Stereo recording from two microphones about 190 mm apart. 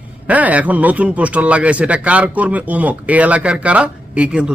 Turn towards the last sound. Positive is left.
turn(degrees=-5)  # may be behind; listen again after turning